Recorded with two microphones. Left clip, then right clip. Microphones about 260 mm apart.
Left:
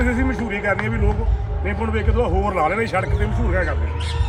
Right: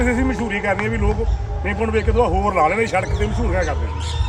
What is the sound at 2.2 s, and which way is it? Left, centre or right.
Speech, right.